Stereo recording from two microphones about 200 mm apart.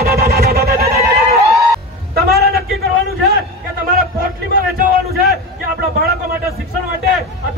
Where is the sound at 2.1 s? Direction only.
50° right (ahead or behind).